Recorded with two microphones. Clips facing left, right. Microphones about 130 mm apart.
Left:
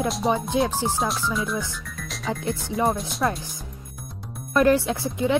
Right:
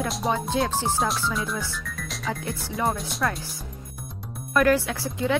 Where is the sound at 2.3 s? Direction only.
20° left (ahead or behind).